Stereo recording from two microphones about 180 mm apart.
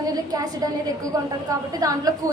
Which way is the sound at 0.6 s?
20° right (ahead or behind).